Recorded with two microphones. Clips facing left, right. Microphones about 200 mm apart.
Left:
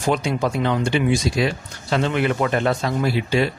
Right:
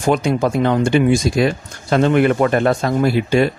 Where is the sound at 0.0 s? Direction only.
50° right (ahead or behind).